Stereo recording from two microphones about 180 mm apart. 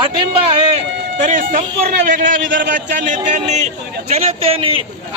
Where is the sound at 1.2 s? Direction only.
45° right (ahead or behind).